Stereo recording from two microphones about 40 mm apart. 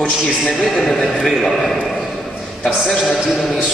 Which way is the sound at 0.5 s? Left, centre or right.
Centre.